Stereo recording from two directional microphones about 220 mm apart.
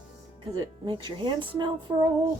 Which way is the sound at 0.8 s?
20° right (ahead or behind).